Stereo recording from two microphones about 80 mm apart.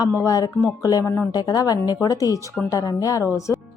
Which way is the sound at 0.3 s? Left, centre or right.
Left.